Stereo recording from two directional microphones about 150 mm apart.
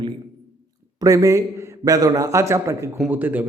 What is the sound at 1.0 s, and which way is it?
A man's voice, 20° right (ahead or behind).